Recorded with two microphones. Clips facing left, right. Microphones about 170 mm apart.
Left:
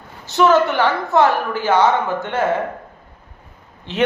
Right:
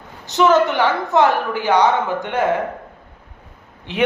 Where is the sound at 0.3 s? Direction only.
20° right (ahead or behind).